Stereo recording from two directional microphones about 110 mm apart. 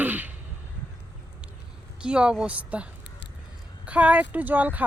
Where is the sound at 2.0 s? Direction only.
10° right (ahead or behind).